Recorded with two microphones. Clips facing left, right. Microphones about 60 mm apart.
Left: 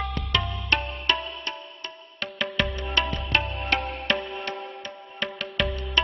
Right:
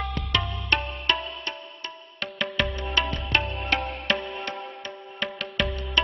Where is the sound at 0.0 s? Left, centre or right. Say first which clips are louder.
Even; centre.